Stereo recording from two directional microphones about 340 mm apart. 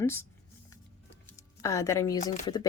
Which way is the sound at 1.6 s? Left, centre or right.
Centre.